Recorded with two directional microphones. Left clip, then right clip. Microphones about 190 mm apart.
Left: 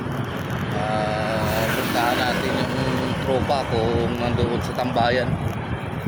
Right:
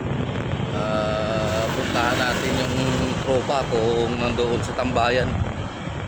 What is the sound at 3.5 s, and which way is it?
Speech, 25° right (ahead or behind).